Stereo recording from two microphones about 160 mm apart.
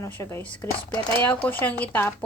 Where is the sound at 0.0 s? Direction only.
15° left (ahead or behind).